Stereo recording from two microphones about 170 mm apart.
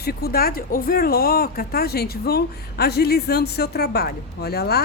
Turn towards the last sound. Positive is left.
turn(degrees=70)  # may be behind; listen again after turning